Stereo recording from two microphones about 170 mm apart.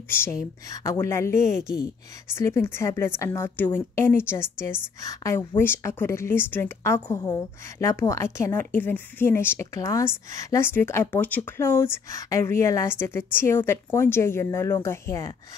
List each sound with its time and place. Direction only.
0.1 s a woman's voice: 15° left (ahead or behind)
1.3 s a woman's voice: 45° right (ahead or behind)
2.3 s a woman's voice: 15° left (ahead or behind)